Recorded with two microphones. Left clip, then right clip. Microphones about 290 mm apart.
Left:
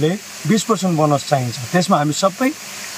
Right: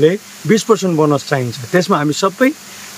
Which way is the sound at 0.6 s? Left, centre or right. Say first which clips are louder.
Right 3 dB; centre.